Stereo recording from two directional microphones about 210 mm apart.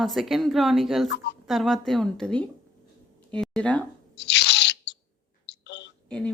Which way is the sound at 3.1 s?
5° left (ahead or behind).